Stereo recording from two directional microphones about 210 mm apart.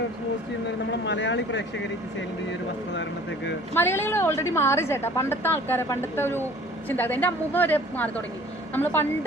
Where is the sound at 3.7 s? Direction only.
10° left (ahead or behind).